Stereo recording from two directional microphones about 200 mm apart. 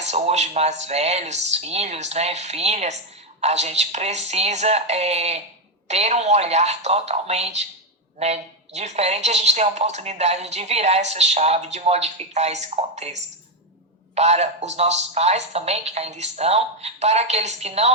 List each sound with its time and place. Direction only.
0.0 s a woman's voice: 35° right (ahead or behind)